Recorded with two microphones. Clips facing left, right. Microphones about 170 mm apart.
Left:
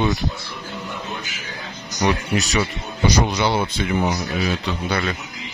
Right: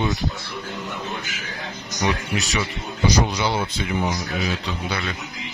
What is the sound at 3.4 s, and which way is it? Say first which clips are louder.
Speech: left 3 dB; 60° left (ahead or behind).